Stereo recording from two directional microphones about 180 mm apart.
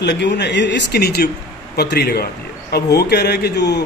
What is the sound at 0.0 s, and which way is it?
A man's voice, 70° left (ahead or behind).